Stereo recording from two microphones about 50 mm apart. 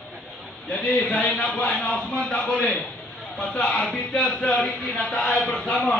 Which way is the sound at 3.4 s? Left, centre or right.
Left.